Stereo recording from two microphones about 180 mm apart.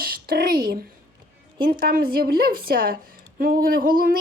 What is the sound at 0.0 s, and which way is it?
Speech, 55° right (ahead or behind).